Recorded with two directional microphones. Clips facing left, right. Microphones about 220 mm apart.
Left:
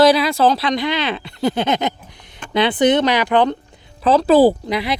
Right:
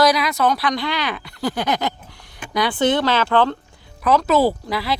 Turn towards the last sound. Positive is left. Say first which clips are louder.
# left 4 dB
turn(degrees=20)  # may be behind; listen again after turning